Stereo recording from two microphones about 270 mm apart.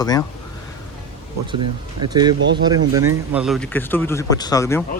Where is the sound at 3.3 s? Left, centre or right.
Centre.